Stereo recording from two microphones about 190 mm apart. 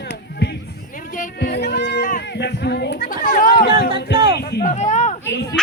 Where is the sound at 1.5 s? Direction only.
60° left (ahead or behind).